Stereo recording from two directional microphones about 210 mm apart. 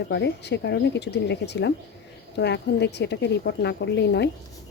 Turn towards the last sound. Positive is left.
turn(degrees=55)  # may be behind; listen again after turning